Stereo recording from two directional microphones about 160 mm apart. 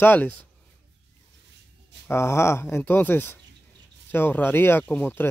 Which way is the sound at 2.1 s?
15° left (ahead or behind).